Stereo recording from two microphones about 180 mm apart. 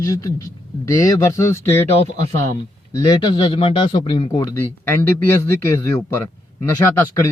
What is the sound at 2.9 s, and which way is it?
A man's voice, 20° left (ahead or behind).